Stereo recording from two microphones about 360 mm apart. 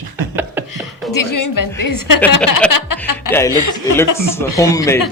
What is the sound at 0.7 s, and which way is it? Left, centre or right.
A woman's voice, left.